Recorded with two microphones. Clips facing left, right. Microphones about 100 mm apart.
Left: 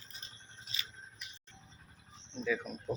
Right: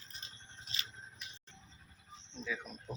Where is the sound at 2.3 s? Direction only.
Centre (ahead or behind).